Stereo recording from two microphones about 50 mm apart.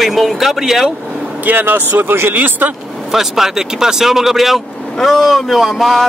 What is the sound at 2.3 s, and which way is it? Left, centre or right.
Speech, right.